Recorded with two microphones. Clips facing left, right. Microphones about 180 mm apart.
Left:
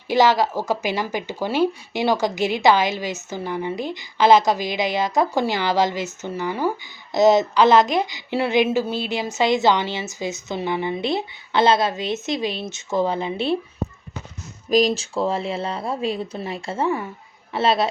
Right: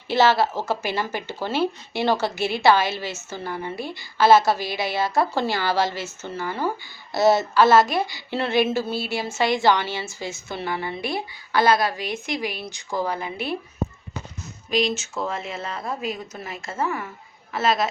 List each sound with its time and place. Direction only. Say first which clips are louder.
0.1 s a woman's voice: left 2 dB; 15° left (ahead or behind)
14.7 s speech: left 5 dB; 40° left (ahead or behind)